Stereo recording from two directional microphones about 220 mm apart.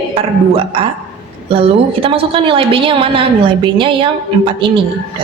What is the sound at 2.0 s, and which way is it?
A woman's voice, 25° right (ahead or behind).